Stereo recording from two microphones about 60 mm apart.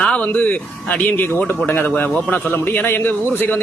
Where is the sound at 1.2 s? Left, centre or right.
Left.